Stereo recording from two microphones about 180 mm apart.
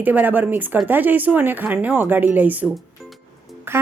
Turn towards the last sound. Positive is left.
turn(degrees=-15)  # may be behind; listen again after turning